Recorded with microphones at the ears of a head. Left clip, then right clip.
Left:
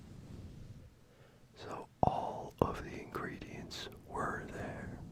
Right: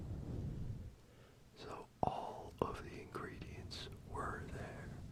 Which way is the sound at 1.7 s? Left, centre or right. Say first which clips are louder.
Left 7 dB; left.